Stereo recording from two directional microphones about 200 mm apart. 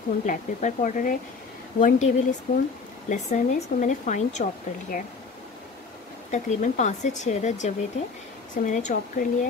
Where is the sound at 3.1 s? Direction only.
40° left (ahead or behind).